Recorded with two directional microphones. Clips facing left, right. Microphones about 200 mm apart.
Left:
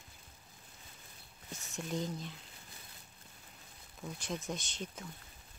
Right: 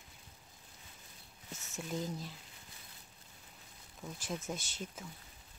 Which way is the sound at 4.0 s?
Centre (ahead or behind).